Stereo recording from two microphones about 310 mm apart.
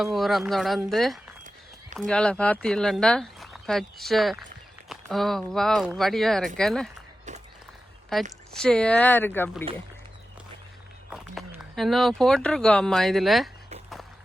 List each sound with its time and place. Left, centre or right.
0.0 s speech: centre
7.3 s a sound: right
8.5 s speech: centre
11.1 s speech: centre